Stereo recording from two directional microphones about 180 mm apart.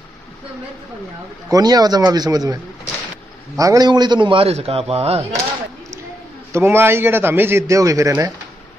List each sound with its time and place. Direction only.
1.5 s a man's voice: 20° right (ahead or behind)
6.5 s a man's voice: 15° right (ahead or behind)